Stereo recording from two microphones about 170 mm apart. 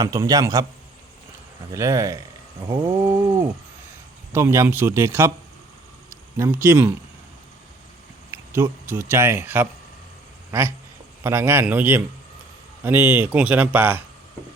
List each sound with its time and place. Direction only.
0.0 s a man's voice: 20° right (ahead or behind)
1.7 s a man's voice: 15° right (ahead or behind)
4.3 s a man's voice: 15° right (ahead or behind)
8.3 s a man's voice: 15° right (ahead or behind)